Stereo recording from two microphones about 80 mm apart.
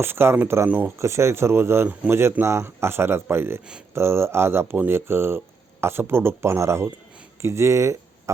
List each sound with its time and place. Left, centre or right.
0.0 s speech: right
0.7 s speech: right
0.9 s speech: right